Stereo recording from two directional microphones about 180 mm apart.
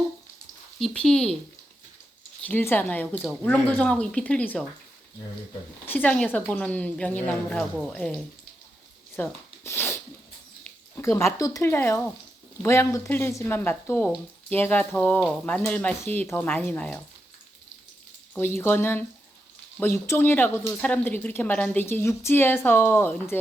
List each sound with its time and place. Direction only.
0.8 s speech: 5° left (ahead or behind)
2.4 s speech: 10° left (ahead or behind)
5.8 s speech: 10° left (ahead or behind)
9.1 s a sound: 10° left (ahead or behind)
11.3 s speech: 20° left (ahead or behind)
18.3 s speech: 10° left (ahead or behind)